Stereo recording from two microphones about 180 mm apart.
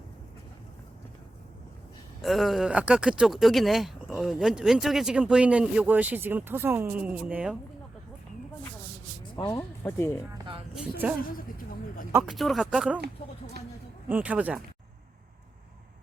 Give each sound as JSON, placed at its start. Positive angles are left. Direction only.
{"t": 2.2, "sound": "speech", "side_deg": 0}
{"t": 9.5, "sound": "speech", "side_deg": 10}
{"t": 10.3, "sound": "a sound", "side_deg": -25}
{"t": 12.2, "sound": "speech", "side_deg": 0}
{"t": 14.1, "sound": "speech", "side_deg": -10}